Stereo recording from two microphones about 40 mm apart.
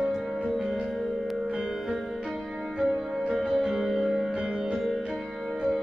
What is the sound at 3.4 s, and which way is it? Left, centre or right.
Music, centre.